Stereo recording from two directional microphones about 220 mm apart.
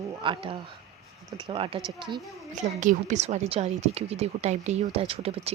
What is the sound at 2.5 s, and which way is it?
Speech, 35° right (ahead or behind).